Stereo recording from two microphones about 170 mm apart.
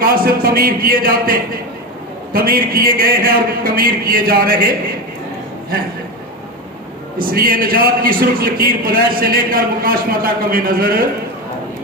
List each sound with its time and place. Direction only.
0.0 s a man's voice: 60° right (ahead or behind)
7.2 s a man's voice: 60° right (ahead or behind)